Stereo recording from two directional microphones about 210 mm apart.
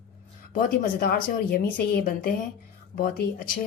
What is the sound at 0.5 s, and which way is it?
A woman's voice, 45° left (ahead or behind).